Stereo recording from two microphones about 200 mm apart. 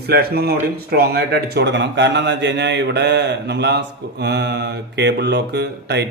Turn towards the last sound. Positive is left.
turn(degrees=-55)  # may be behind; listen again after turning